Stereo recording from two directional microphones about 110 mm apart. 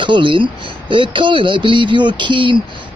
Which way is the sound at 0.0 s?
50° right (ahead or behind).